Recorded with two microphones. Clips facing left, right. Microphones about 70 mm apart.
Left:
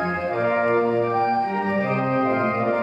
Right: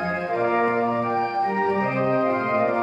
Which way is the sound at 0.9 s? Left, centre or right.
Right.